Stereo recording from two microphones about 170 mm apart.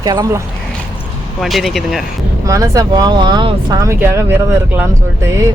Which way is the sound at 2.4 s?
20° right (ahead or behind).